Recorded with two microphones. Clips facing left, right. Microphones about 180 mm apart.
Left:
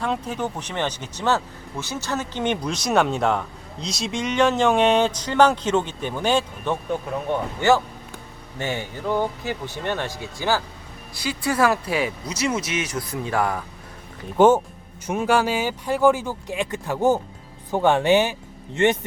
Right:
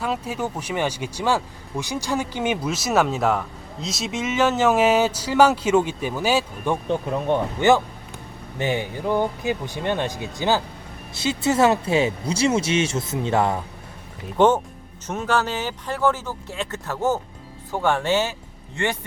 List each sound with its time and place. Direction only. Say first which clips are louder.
0.0 s speech: even; 5° right (ahead or behind)
7.6 s speech: even; 20° right (ahead or behind)
14.3 s speech: left 2 dB; 10° left (ahead or behind)